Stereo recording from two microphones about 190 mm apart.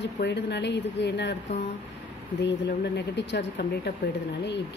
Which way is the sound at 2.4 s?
65° left (ahead or behind).